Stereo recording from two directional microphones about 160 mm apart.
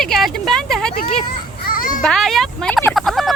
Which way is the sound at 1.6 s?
60° left (ahead or behind).